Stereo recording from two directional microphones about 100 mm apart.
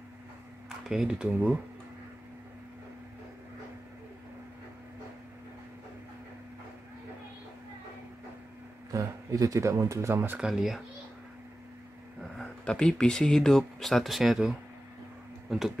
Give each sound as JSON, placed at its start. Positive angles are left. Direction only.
{"t": 0.8, "sound": "speech", "side_deg": -5}
{"t": 8.9, "sound": "speech", "side_deg": -35}
{"t": 10.3, "sound": "speech", "side_deg": -5}
{"t": 12.4, "sound": "speech", "side_deg": 10}